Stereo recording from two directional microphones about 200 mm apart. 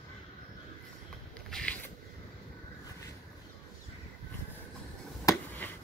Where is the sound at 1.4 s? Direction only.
5° left (ahead or behind).